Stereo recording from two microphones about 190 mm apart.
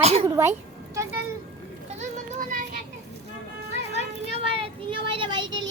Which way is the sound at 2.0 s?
45° right (ahead or behind).